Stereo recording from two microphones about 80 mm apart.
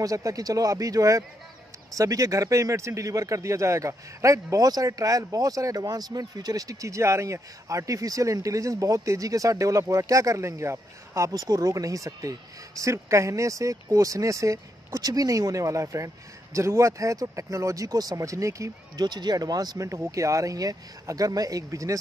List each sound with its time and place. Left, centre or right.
0.0 s speech: right
11.3 s speech: right
18.9 s speech: right